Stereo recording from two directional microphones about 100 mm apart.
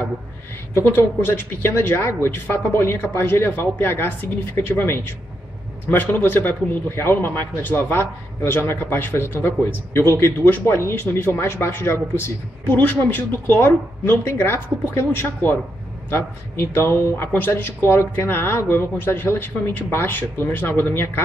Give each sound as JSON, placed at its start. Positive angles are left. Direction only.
{"t": 0.7, "sound": "speech", "side_deg": 25}